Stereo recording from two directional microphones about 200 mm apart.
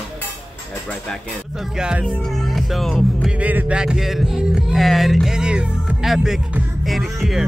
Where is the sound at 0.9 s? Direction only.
Centre (ahead or behind).